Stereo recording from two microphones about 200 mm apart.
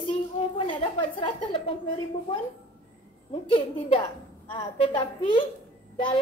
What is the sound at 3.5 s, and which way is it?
A woman's voice, 25° left (ahead or behind).